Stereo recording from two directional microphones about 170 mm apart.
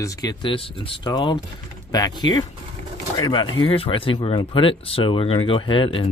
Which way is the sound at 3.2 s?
25° left (ahead or behind).